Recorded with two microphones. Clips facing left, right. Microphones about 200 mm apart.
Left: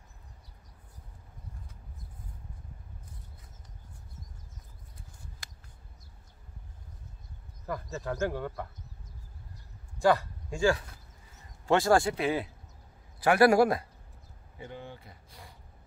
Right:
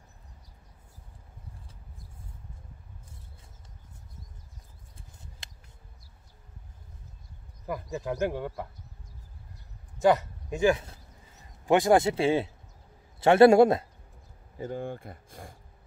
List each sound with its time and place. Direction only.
5.4 s a sound: 25° right (ahead or behind)
7.9 s speech: 15° right (ahead or behind)
9.9 s speech: 20° right (ahead or behind)
14.6 s speech: 45° right (ahead or behind)